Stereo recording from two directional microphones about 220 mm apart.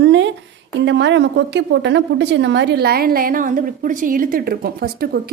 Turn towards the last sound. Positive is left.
turn(degrees=-45)  # may be behind; listen again after turning